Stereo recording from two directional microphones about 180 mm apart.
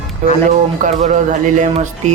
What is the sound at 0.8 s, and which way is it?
Speech, 45° right (ahead or behind).